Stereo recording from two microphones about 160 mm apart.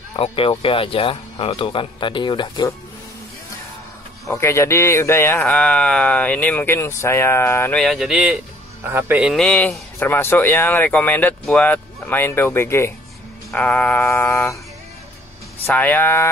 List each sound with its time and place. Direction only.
0.1 s speech: 35° left (ahead or behind)
4.3 s speech: 15° left (ahead or behind)
7.8 s a man's voice: centre (ahead or behind)
9.4 s speech: 5° left (ahead or behind)
15.6 s speech: 10° left (ahead or behind)